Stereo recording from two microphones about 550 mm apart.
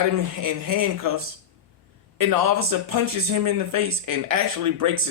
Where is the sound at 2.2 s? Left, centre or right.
Right.